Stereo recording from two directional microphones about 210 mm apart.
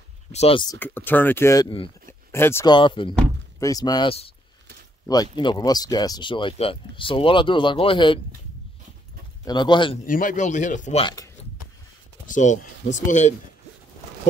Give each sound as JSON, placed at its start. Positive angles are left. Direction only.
{"t": 0.3, "sound": "speech", "side_deg": 30}
{"t": 0.7, "sound": "speech", "side_deg": 10}
{"t": 2.0, "sound": "a sound", "side_deg": 10}
{"t": 2.7, "sound": "speech", "side_deg": 25}
{"t": 9.4, "sound": "speech", "side_deg": 20}
{"t": 10.0, "sound": "speech", "side_deg": 40}
{"t": 12.3, "sound": "speech", "side_deg": 35}